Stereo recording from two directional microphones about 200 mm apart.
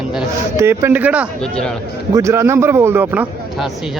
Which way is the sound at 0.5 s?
15° right (ahead or behind).